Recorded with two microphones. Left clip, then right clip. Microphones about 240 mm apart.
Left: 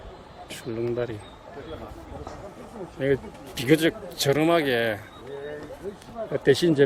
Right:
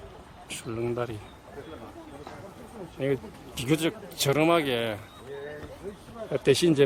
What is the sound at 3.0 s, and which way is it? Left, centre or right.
A man's voice, centre.